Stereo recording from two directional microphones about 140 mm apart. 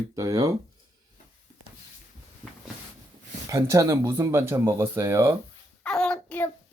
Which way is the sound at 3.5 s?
20° right (ahead or behind).